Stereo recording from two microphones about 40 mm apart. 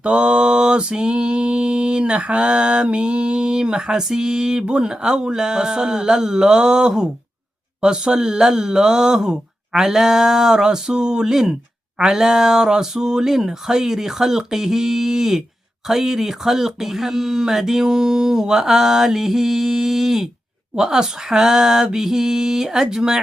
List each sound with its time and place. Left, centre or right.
0.0 s mantra: right
7.8 s speech: centre